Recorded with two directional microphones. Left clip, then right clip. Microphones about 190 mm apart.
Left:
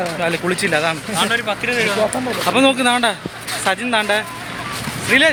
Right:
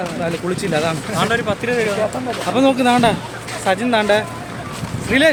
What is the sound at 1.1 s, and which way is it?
Speech, 55° right (ahead or behind).